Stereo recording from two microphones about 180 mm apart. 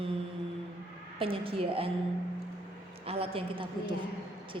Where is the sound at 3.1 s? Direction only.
30° right (ahead or behind).